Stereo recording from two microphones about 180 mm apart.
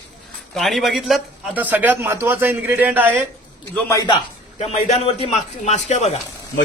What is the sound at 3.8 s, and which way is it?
Speech, 15° left (ahead or behind).